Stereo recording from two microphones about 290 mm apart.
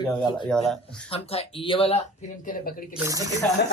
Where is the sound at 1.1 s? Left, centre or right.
Centre.